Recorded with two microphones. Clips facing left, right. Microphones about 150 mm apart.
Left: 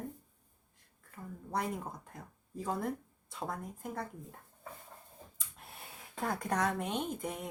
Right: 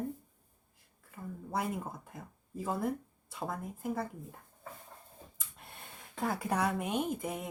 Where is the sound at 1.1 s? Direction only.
5° right (ahead or behind).